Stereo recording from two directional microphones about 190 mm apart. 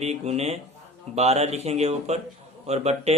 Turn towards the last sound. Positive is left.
turn(degrees=-35)  # may be behind; listen again after turning